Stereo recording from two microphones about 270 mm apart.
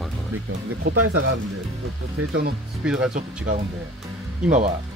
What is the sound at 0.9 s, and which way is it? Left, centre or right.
Speech, right.